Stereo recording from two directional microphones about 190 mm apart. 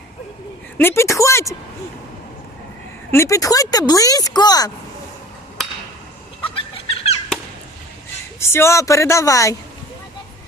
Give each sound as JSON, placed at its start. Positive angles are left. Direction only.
{"t": 0.8, "sound": "speech", "side_deg": 15}
{"t": 3.1, "sound": "speech", "side_deg": 15}
{"t": 6.5, "sound": "a sound", "side_deg": 30}
{"t": 8.4, "sound": "speech", "side_deg": 15}